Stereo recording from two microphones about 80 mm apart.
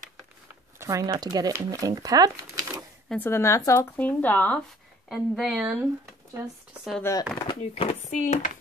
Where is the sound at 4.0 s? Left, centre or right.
Left.